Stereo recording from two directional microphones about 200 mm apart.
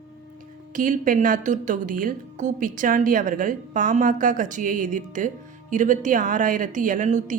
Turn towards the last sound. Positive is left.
turn(degrees=-40)  # may be behind; listen again after turning